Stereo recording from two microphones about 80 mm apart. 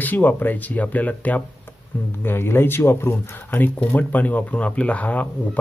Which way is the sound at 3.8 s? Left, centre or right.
Left.